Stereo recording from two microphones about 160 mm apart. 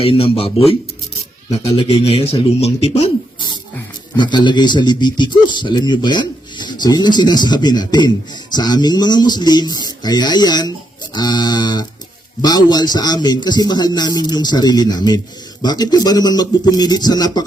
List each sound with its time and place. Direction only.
0.0 s speech: 35° left (ahead or behind)
4.2 s speech: 30° left (ahead or behind)